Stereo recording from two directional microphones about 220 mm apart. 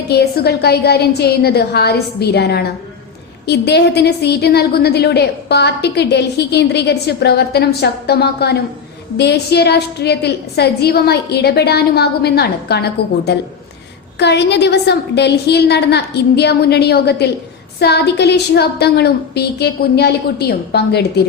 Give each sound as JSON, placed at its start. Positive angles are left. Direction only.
{"t": 0.1, "sound": "a woman's voice", "side_deg": 45}